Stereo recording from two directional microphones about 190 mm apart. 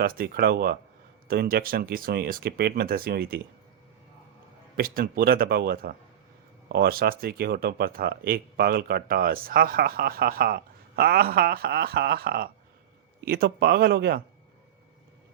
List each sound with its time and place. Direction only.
0.0 s speech: 50° right (ahead or behind)
4.8 s speech: 55° right (ahead or behind)